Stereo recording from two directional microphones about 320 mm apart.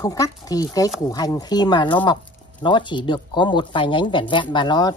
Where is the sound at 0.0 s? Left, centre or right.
Centre.